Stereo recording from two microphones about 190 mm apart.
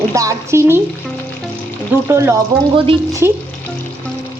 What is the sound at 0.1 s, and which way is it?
Speech, 15° right (ahead or behind).